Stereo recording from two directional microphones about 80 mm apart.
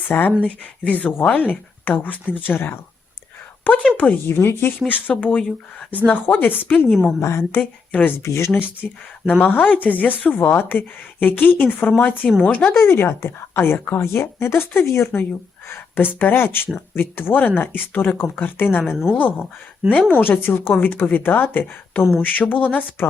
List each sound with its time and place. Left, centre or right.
0.1 s speech: left
3.8 s speech: centre
4.3 s speech: left
5.1 s speech: centre
7.0 s a woman's voice: left
8.8 s speech: centre
9.4 s a woman's voice: left